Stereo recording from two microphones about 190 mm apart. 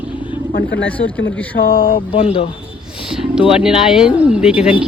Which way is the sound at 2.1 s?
30° left (ahead or behind).